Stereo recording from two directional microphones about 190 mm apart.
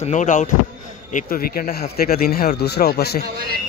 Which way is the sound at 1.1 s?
50° left (ahead or behind).